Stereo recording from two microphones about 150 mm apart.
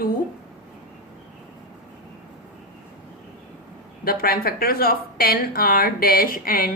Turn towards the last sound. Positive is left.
turn(degrees=75)  # may be behind; listen again after turning